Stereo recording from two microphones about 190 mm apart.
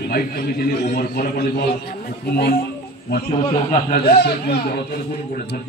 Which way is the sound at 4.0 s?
55° left (ahead or behind).